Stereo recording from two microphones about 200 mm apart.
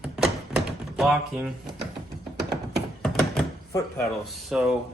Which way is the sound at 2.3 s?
55° right (ahead or behind).